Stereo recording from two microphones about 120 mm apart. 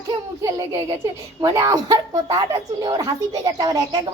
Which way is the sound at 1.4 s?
35° right (ahead or behind).